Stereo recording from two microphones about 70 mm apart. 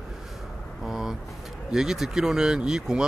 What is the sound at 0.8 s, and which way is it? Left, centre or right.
Speech, centre.